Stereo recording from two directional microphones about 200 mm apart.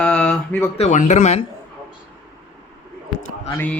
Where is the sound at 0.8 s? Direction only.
35° left (ahead or behind).